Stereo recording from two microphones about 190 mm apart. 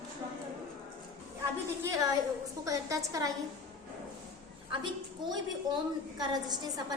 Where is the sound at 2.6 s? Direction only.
15° right (ahead or behind).